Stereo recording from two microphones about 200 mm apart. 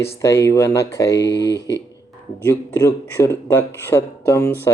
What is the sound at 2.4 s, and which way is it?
Speech, 10° left (ahead or behind).